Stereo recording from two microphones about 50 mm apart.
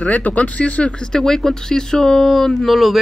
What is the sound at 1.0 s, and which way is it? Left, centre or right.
Speech, centre.